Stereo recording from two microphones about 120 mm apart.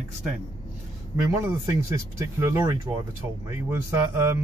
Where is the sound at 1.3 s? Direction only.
20° right (ahead or behind).